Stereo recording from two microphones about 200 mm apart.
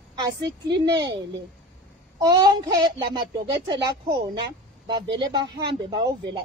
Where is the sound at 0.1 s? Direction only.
20° right (ahead or behind).